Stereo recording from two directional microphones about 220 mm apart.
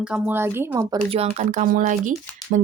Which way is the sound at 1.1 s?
30° right (ahead or behind).